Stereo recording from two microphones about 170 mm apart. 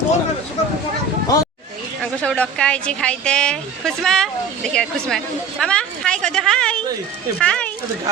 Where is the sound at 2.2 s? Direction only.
5° left (ahead or behind).